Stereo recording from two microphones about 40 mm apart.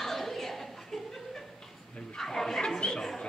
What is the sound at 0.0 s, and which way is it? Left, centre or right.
Chuckle, centre.